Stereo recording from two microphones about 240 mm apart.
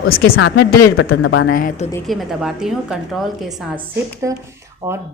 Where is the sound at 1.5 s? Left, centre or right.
Left.